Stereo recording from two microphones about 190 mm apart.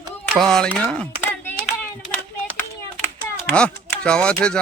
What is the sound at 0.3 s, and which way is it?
Speech, 5° left (ahead or behind).